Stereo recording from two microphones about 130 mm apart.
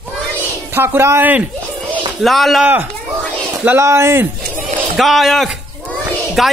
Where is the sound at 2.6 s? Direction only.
15° right (ahead or behind).